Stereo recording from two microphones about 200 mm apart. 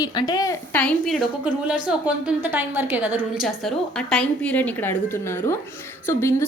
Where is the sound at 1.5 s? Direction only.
5° right (ahead or behind).